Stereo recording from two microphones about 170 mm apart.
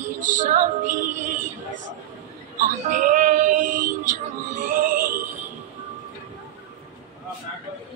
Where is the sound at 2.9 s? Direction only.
50° right (ahead or behind).